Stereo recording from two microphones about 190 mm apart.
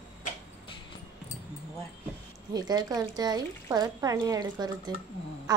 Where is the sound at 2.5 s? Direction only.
20° right (ahead or behind).